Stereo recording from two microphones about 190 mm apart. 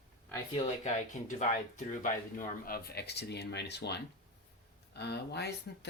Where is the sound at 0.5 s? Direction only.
40° left (ahead or behind).